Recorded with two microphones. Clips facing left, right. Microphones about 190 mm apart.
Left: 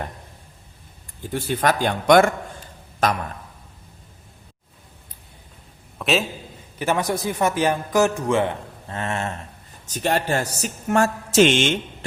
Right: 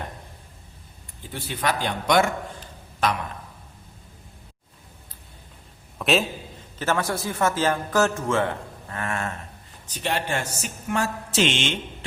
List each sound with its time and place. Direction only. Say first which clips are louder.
1.2 s a woman's voice: left 6 dB; 45° left (ahead or behind)
6.0 s a sound: even; centre (ahead or behind)
6.7 s speech: left 3 dB; 15° left (ahead or behind)
9.8 s a woman's voice: left 5 dB; 45° left (ahead or behind)